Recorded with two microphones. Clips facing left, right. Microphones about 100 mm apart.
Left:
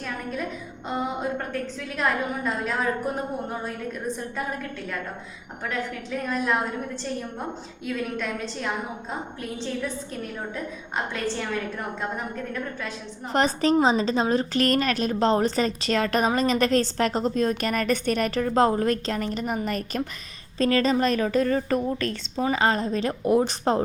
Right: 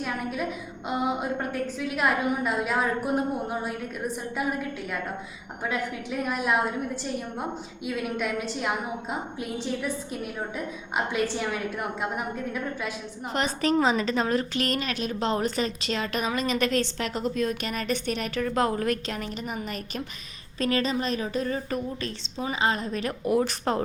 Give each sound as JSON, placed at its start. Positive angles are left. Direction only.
{"t": 0.0, "sound": "a sound", "side_deg": -10}
{"t": 2.0, "sound": "a woman's voice", "side_deg": -10}
{"t": 5.6, "sound": "a woman's voice", "side_deg": -10}
{"t": 7.9, "sound": "a woman's voice", "side_deg": -10}
{"t": 13.3, "sound": "a woman's voice", "side_deg": 35}
{"t": 14.5, "sound": "a woman's voice", "side_deg": 45}